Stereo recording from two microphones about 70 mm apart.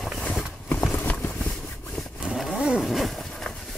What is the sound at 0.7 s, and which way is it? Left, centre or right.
Clip-clop, centre.